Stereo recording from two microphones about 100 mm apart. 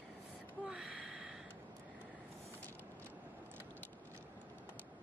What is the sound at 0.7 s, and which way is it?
Gasp, 5° right (ahead or behind).